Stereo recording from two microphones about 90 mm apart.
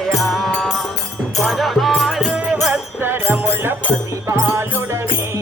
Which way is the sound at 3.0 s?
25° right (ahead or behind).